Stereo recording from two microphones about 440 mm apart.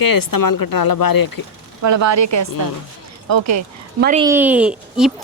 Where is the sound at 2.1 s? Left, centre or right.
Right.